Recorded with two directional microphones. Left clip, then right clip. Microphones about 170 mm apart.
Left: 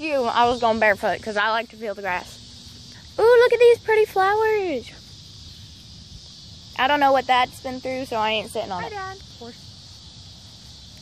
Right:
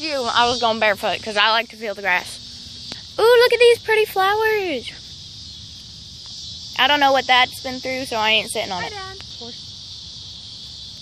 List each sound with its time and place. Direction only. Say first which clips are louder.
0.0 s speech: right 1 dB; 35° left (ahead or behind)
1.2 s speech: right 5 dB; 15° left (ahead or behind)
6.8 s speech: right 2 dB; 10° left (ahead or behind)